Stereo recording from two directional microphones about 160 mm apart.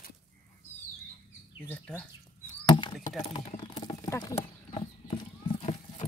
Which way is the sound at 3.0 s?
50° left (ahead or behind).